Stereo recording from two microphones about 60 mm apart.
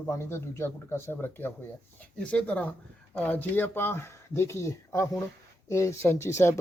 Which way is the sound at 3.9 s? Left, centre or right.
Left.